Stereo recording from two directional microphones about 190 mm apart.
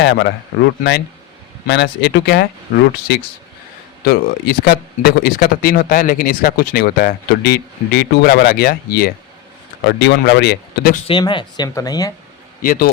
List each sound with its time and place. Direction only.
0.0 s a man's voice: 65° left (ahead or behind)
1.6 s speech: 65° left (ahead or behind)
9.8 s speech: 65° left (ahead or behind)
10.9 s speech: 30° left (ahead or behind)
12.6 s speech: 50° left (ahead or behind)